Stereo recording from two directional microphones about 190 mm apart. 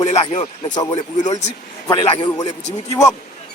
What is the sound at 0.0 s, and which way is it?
Speech, 30° left (ahead or behind).